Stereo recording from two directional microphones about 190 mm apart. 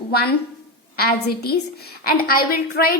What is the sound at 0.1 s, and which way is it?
A woman's voice, 55° left (ahead or behind).